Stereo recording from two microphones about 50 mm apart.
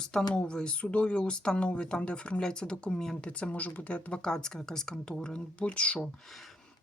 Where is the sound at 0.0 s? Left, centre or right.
Centre.